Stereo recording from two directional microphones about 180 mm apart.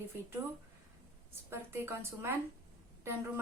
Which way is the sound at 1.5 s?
15° right (ahead or behind).